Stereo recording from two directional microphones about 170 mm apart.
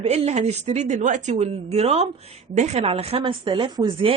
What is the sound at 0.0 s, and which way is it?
Speech, 40° right (ahead or behind).